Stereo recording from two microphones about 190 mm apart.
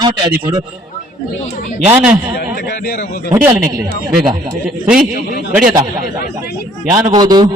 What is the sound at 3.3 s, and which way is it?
Speech, 15° right (ahead or behind).